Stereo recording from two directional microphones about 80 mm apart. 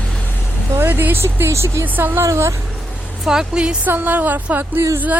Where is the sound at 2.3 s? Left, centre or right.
Right.